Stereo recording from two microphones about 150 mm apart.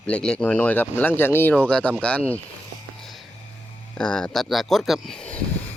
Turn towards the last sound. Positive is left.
turn(degrees=5)  # may be behind; listen again after turning